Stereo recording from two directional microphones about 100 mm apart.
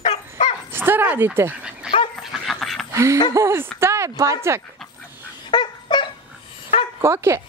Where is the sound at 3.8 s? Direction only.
30° right (ahead or behind).